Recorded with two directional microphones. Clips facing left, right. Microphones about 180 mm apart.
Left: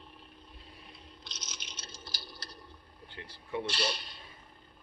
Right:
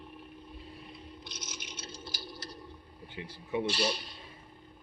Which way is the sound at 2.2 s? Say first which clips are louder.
Right 5 dB; 50° right (ahead or behind).